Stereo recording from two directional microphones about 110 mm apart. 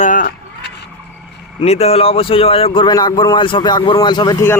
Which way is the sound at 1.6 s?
70° left (ahead or behind).